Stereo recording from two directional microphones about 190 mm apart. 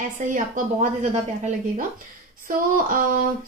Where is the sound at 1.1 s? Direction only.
40° right (ahead or behind).